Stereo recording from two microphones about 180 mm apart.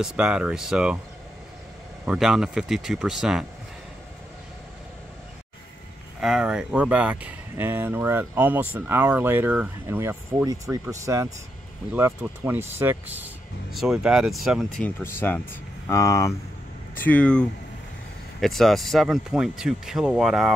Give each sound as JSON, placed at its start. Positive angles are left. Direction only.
{"t": 0.0, "sound": "speech", "side_deg": -5}
{"t": 2.0, "sound": "speech", "side_deg": 0}
{"t": 6.2, "sound": "speech", "side_deg": -5}
{"t": 15.0, "sound": "speech", "side_deg": 10}